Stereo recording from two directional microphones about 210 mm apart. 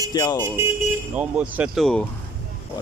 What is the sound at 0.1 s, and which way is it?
Speech, 20° left (ahead or behind).